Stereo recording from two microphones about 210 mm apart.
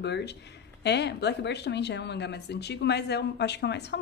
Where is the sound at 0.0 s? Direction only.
55° left (ahead or behind).